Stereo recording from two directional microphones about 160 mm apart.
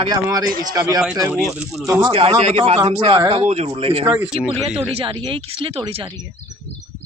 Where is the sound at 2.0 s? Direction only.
35° right (ahead or behind).